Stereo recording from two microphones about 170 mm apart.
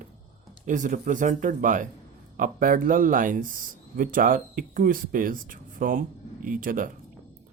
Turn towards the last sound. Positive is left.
turn(degrees=-50)  # may be behind; listen again after turning